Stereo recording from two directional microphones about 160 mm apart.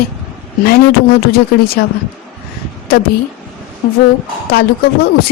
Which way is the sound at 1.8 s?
90° left.